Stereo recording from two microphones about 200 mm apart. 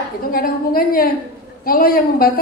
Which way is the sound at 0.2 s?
45° left (ahead or behind).